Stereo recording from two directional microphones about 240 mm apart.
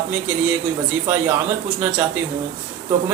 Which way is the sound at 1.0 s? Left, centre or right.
Centre.